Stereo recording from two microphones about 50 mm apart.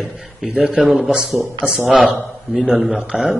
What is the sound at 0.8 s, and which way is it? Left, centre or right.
Speech, centre.